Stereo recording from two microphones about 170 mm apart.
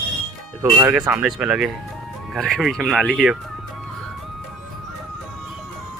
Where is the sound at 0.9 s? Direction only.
5° right (ahead or behind).